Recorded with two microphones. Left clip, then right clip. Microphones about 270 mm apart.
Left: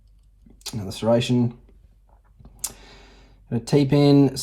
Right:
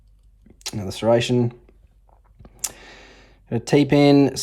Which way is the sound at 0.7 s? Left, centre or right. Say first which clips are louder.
Right 2 dB; right.